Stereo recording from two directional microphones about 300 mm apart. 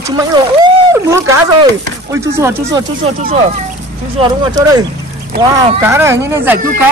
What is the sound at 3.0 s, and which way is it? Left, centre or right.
Speech, right.